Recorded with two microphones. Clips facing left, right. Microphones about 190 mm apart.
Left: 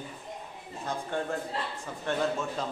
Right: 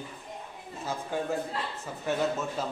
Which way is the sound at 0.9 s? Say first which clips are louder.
Right 1 dB; 5° right (ahead or behind).